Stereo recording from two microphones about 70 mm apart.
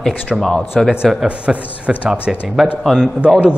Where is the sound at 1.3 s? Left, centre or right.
Centre.